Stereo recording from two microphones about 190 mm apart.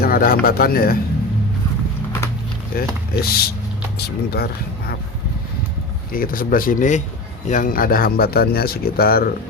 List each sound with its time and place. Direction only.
0.0 s a sound: 50° left (ahead or behind)
0.4 s speech: 50° left (ahead or behind)
2.7 s speech: 50° left (ahead or behind)
6.1 s speech: 50° left (ahead or behind)